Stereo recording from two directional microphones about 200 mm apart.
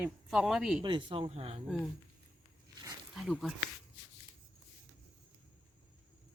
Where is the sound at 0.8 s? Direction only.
25° right (ahead or behind).